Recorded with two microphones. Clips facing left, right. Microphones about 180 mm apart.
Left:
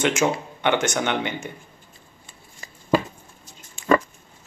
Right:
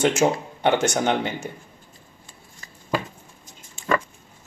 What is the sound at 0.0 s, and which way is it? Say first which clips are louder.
Speech: right 2 dB; 35° right (ahead or behind).